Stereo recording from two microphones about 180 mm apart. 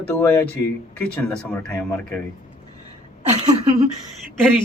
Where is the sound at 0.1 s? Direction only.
15° left (ahead or behind).